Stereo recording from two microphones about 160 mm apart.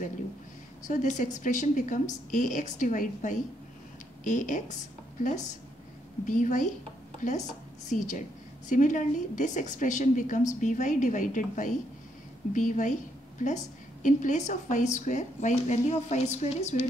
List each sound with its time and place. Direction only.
0.8 s a woman's voice: 50° left (ahead or behind)